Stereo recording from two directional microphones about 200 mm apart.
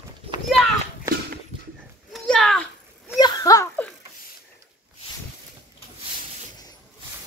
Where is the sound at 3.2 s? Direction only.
15° left (ahead or behind).